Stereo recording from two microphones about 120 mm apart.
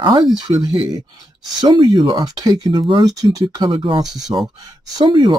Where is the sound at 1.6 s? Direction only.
40° right (ahead or behind).